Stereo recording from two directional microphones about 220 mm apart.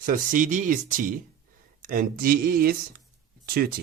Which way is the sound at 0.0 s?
40° right (ahead or behind).